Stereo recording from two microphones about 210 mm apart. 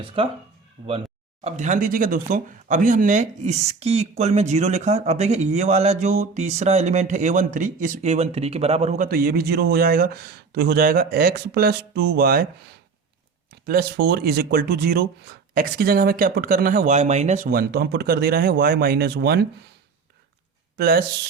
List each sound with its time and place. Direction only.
0.0 s speech: 25° right (ahead or behind); by 12.5 s 45° right (ahead or behind)
13.5 s speech: 50° right (ahead or behind)
20.7 s speech: 45° right (ahead or behind)